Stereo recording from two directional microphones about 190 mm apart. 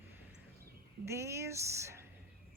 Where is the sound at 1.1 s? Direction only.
15° right (ahead or behind).